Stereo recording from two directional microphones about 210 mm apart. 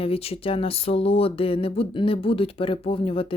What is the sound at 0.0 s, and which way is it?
Speech, 25° left (ahead or behind).